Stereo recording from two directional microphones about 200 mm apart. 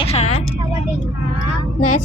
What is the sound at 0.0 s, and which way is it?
Vehicle, 30° left (ahead or behind).